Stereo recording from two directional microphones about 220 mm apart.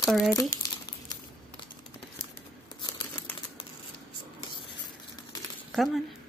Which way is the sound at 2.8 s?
20° left (ahead or behind).